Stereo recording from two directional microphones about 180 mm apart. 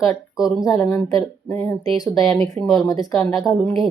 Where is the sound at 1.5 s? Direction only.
15° left (ahead or behind).